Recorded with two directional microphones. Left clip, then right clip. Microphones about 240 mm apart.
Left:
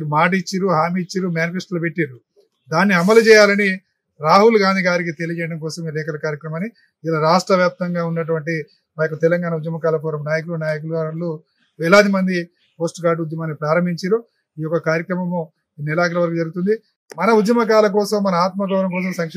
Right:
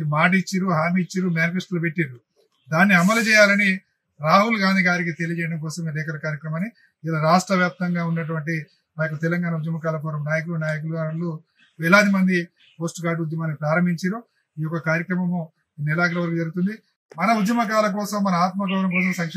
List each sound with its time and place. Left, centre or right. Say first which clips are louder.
0.1 s a man's voice: left 3 dB; centre